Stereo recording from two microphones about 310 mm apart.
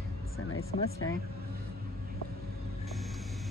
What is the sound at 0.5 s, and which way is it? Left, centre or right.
Speech, left.